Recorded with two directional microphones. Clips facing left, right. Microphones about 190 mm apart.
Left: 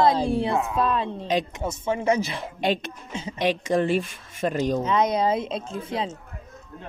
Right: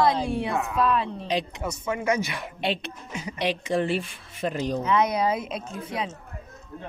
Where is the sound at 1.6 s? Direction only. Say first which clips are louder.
Left 3 dB; 30° left (ahead or behind).